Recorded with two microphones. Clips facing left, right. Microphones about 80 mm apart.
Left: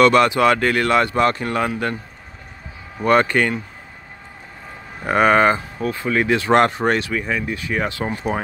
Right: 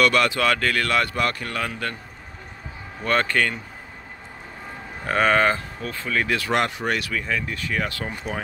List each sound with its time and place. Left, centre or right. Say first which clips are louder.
0.0 s speech: left 6 dB; left
3.0 s speech: left 6 dB; centre
5.0 s speech: left 5 dB; centre
6.5 s speech: left 9 dB; left